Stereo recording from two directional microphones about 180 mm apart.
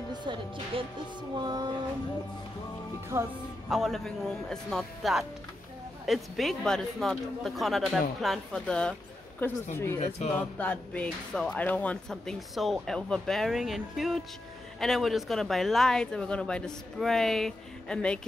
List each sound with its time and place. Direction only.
0.1 s speech: 25° right (ahead or behind)
3.1 s speech: 15° right (ahead or behind)
3.7 s a woman's voice: centre (ahead or behind)